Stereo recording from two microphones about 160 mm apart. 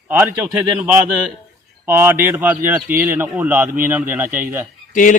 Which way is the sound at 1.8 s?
15° right (ahead or behind).